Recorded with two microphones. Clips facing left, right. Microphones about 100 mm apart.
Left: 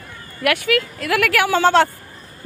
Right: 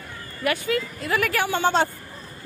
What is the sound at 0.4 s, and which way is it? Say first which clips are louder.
A woman's voice: left 5 dB; 75° left (ahead or behind).